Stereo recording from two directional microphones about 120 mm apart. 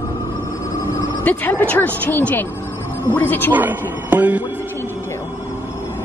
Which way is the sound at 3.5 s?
15° right (ahead or behind).